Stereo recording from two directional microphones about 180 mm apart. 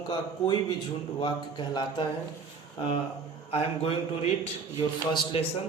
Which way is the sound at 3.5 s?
30° left (ahead or behind).